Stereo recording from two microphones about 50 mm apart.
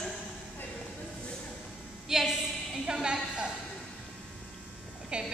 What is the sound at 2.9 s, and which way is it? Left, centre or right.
Speech, centre.